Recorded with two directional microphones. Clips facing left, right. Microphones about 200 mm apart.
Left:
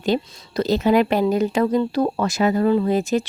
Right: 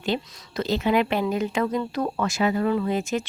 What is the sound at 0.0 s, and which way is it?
Speech, 40° left (ahead or behind).